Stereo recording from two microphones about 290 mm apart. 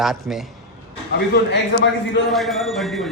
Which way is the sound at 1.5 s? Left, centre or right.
Left.